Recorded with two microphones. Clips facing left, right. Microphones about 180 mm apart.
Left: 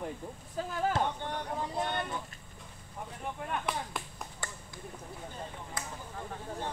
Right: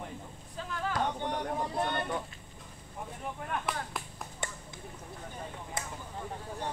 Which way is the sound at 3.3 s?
Centre (ahead or behind).